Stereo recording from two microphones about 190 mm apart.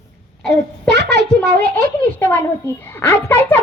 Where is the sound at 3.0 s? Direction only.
10° left (ahead or behind).